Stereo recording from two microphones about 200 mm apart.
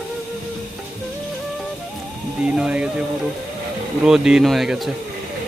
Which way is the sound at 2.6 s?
5° right (ahead or behind).